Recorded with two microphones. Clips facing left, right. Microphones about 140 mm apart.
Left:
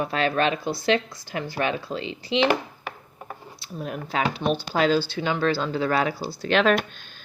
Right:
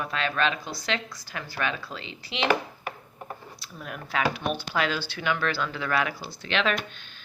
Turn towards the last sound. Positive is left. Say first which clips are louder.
# left 7 dB
turn(degrees=45)  # may be behind; listen again after turning